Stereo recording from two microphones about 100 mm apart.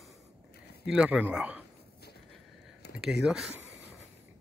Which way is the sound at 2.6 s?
5° right (ahead or behind).